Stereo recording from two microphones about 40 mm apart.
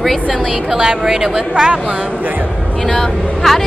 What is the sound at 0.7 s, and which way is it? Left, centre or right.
Speech, centre.